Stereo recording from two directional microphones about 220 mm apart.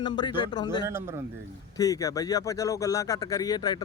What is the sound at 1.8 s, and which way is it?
Speech, 15° left (ahead or behind).